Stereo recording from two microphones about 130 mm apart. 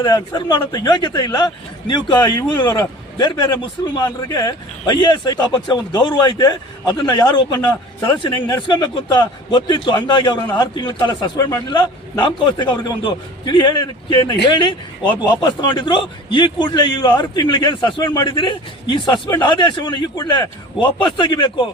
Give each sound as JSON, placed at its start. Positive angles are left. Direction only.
{"t": 0.0, "sound": "a man's voice", "side_deg": 30}